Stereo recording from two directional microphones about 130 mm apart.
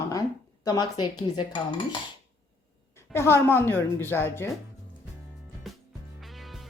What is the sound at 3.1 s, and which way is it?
A woman's voice, 20° left (ahead or behind).